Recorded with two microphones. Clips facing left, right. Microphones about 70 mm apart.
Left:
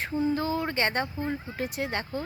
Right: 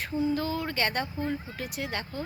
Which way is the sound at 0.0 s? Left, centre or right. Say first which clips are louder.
Left 1 dB; left.